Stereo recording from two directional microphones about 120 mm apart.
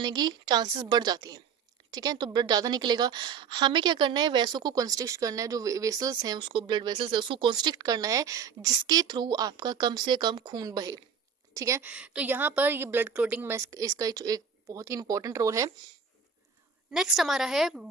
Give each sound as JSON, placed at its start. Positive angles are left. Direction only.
{"t": 0.0, "sound": "speech", "side_deg": -35}
{"t": 6.4, "sound": "a woman's voice", "side_deg": -45}
{"t": 11.8, "sound": "a woman's voice", "side_deg": -10}
{"t": 16.9, "sound": "a woman's voice", "side_deg": 0}